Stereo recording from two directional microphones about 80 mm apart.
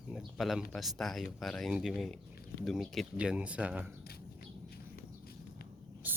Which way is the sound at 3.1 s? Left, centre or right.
Centre.